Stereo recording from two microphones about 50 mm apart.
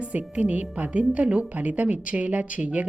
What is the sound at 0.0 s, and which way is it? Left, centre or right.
A woman's voice, right.